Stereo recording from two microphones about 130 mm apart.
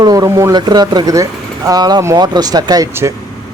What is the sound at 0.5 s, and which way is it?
A man's voice, 35° right (ahead or behind).